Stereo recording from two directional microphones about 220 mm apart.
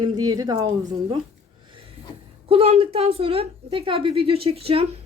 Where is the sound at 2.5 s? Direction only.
25° right (ahead or behind).